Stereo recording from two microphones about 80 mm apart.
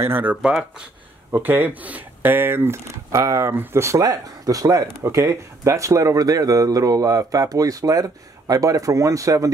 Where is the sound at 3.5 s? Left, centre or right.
Right.